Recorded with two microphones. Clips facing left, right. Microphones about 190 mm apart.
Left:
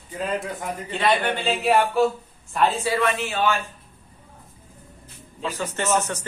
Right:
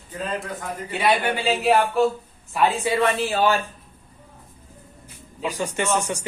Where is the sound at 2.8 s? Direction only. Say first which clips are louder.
Right 2 dB; 20° right (ahead or behind).